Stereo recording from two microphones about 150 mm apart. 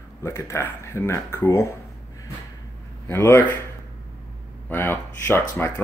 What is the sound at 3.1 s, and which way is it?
Speech, 15° left (ahead or behind).